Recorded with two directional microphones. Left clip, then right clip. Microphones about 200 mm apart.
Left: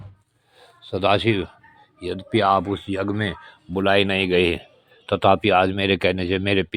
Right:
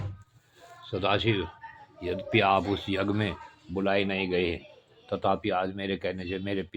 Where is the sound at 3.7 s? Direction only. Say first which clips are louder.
Left 8 dB; 40° left (ahead or behind).